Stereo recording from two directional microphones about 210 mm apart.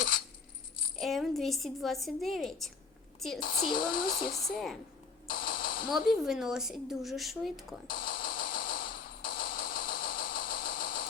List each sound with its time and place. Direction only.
0.9 s a woman's voice: centre (ahead or behind)
3.6 s speech: 40° left (ahead or behind)
5.3 s a sound: 45° left (ahead or behind)
5.9 s speech: centre (ahead or behind)
7.9 s music: 45° left (ahead or behind)